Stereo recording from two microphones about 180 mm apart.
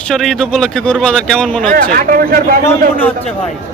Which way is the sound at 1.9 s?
55° right (ahead or behind).